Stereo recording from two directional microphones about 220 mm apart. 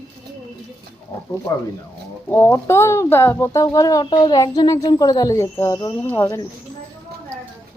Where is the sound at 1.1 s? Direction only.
10° left (ahead or behind).